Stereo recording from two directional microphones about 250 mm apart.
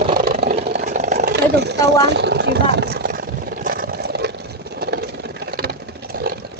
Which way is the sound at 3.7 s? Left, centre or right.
Right.